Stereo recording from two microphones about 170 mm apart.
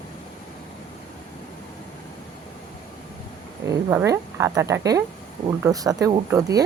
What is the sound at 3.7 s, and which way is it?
Speech, 20° right (ahead or behind).